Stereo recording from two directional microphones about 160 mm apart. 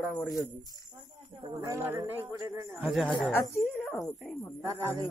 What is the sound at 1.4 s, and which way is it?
Speech, 20° right (ahead or behind).